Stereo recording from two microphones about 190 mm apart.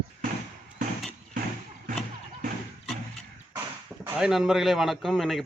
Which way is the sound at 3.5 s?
5° right (ahead or behind).